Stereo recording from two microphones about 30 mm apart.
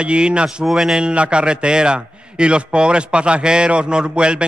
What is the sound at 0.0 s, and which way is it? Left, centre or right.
Speech, right.